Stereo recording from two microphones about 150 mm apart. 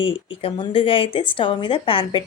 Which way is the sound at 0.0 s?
35° left (ahead or behind).